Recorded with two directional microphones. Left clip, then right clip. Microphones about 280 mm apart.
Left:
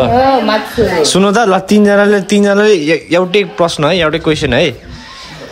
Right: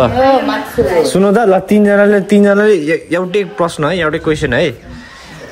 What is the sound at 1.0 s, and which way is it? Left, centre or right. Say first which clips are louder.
Speech: even; centre.